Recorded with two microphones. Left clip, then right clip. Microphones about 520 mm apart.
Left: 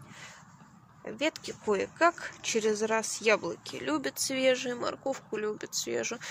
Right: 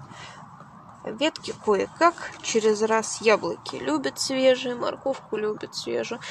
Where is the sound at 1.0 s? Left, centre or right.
Right.